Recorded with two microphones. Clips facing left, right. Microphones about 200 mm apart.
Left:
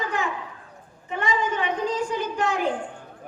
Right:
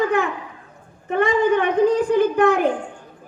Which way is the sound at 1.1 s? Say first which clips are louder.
Right 9 dB; 60° right (ahead or behind).